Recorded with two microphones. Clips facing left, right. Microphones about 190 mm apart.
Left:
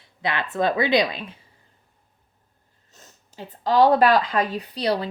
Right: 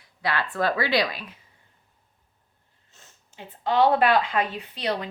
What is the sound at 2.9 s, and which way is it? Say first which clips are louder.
Speech: left 5 dB; 40° left (ahead or behind).